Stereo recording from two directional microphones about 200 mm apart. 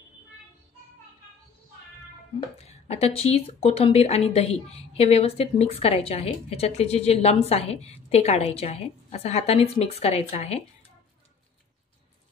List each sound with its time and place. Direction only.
2.6 s speech: 30° left (ahead or behind)